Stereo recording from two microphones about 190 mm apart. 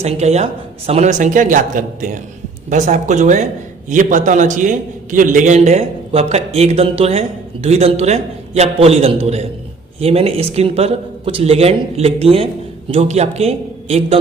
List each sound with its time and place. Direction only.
0.0 s a man's voice: 35° right (ahead or behind)